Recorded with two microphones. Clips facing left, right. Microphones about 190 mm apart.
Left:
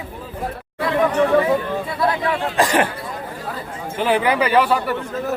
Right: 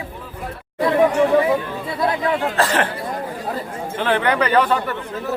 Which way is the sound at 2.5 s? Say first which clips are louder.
Left 2 dB; 15° left (ahead or behind).